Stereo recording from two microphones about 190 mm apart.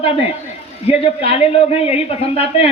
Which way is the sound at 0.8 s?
30° left (ahead or behind).